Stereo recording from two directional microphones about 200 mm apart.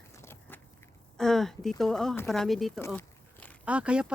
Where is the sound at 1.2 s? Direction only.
Centre (ahead or behind).